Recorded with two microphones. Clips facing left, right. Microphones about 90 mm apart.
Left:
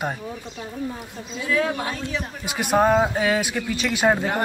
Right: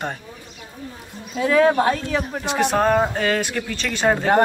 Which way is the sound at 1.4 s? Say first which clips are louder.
Right 8 dB; 55° right (ahead or behind).